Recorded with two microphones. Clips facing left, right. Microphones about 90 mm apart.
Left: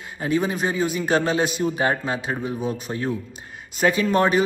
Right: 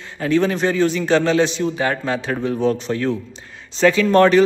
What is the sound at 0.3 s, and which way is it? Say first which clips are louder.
A man's voice: right 5 dB; 10° left (ahead or behind).